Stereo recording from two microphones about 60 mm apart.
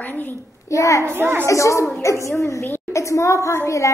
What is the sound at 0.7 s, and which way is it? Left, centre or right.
Speech, left.